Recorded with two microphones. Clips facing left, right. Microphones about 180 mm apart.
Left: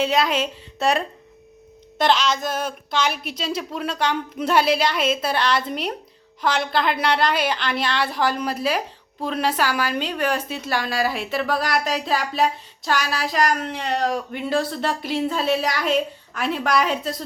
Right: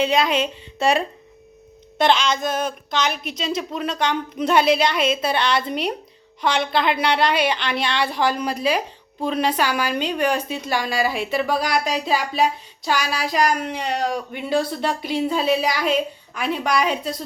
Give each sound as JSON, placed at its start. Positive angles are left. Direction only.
{"t": 0.0, "sound": "a woman's voice", "side_deg": 0}